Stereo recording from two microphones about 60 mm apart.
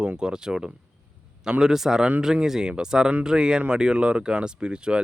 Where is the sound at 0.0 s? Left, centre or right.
Centre.